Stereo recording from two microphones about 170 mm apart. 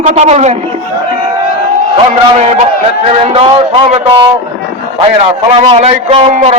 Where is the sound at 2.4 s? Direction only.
40° right (ahead or behind).